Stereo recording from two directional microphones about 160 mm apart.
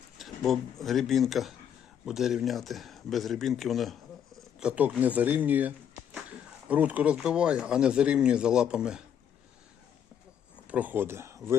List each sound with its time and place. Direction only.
0.2 s speech: centre (ahead or behind)
10.7 s speech: 10° right (ahead or behind)